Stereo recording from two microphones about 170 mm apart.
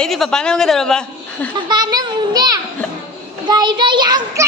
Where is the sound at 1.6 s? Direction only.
25° right (ahead or behind).